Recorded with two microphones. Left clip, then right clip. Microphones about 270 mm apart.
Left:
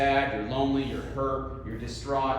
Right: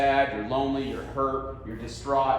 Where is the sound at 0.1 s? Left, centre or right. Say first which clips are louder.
Right 2 dB; centre.